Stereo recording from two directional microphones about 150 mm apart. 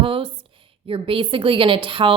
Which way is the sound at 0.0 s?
35° right (ahead or behind).